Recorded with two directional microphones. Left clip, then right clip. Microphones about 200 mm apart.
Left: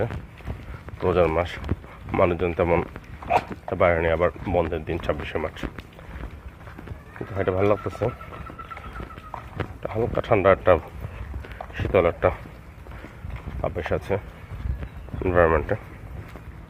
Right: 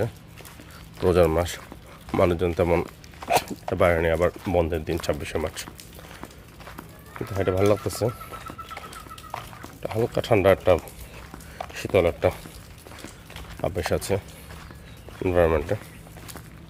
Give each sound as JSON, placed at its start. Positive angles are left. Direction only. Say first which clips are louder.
{"t": 1.0, "sound": "speech", "louder": "right 1 dB", "side_deg": -35}
{"t": 3.2, "sound": "speech", "louder": "even", "side_deg": -35}
{"t": 7.3, "sound": "speech", "louder": "even", "side_deg": -25}
{"t": 9.8, "sound": "speech", "louder": "right 1 dB", "side_deg": -25}
{"t": 10.6, "sound": "speech", "louder": "left 2 dB", "side_deg": -15}
{"t": 11.5, "sound": "a sound", "louder": "left 1 dB", "side_deg": -25}
{"t": 13.6, "sound": "speech", "louder": "right 1 dB", "side_deg": -35}
{"t": 15.2, "sound": "speech", "louder": "left 2 dB", "side_deg": -15}